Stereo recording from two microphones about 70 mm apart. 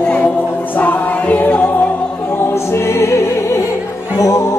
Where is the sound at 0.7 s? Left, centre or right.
Left.